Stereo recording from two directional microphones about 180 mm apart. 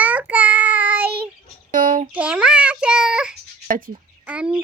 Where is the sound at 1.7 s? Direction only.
50° right (ahead or behind).